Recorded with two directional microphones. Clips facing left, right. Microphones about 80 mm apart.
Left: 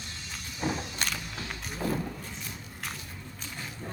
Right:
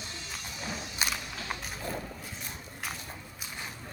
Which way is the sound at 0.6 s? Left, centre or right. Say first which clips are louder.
Left 8 dB; left.